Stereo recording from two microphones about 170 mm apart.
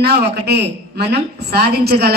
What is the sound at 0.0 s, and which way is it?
A woman's voice, 75° right (ahead or behind).